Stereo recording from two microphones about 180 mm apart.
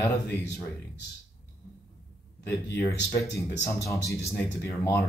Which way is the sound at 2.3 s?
65° left (ahead or behind).